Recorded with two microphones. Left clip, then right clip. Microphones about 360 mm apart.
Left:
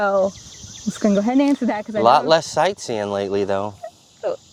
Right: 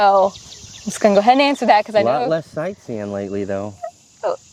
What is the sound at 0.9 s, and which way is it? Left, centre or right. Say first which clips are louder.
Speech: right 7 dB; right.